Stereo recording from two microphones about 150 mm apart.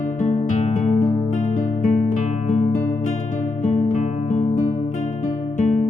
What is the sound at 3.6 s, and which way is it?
Guitar, 50° left (ahead or behind).